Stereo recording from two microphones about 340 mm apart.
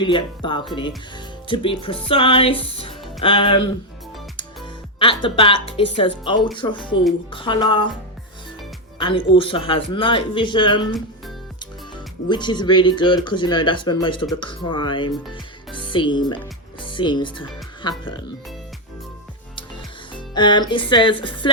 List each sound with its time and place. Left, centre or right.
0.0 s speech: centre
4.9 s speech: centre
9.0 s speech: centre
12.3 s speech: centre
15.3 s music: centre
16.8 s speech: centre
20.1 s speech: centre